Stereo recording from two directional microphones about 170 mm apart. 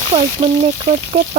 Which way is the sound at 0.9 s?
35° right (ahead or behind).